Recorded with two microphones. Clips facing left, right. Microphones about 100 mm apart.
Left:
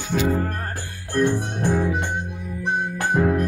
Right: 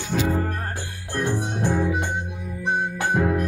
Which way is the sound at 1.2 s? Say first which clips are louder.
Left 3 dB; 15° right (ahead or behind).